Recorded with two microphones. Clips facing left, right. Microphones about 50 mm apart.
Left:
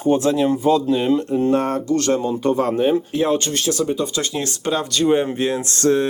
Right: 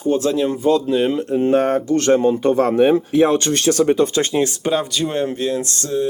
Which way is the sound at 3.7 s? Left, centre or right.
Right.